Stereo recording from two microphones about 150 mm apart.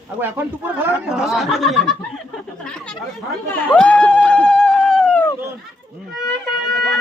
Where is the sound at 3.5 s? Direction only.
5° left (ahead or behind).